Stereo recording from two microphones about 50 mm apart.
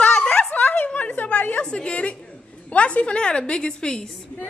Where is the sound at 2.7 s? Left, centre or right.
Left.